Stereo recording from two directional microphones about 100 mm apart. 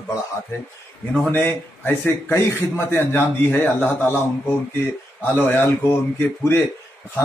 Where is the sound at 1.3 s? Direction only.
20° left (ahead or behind).